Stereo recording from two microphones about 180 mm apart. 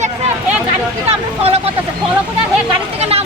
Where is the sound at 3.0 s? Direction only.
35° right (ahead or behind).